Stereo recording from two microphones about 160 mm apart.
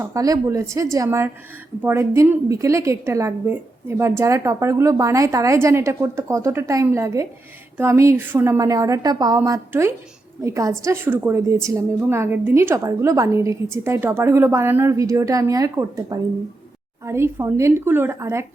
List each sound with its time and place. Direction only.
0.0 s a woman's voice: 20° right (ahead or behind)